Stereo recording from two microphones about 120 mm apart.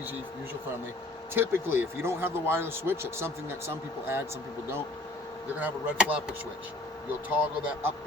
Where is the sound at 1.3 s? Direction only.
15° right (ahead or behind).